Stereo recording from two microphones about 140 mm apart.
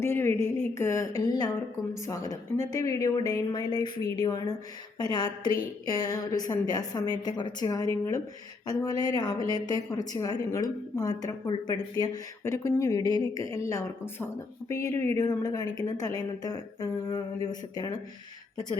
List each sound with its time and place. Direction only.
0.0 s a woman's voice: 15° left (ahead or behind)